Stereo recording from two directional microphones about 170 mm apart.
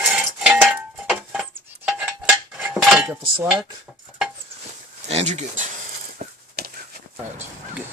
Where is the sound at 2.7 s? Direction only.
Centre (ahead or behind).